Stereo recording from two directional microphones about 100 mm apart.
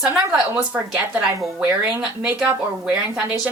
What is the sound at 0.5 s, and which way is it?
A woman's voice, 15° right (ahead or behind).